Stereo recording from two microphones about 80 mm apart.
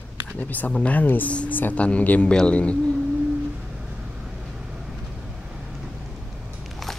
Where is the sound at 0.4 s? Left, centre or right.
Left.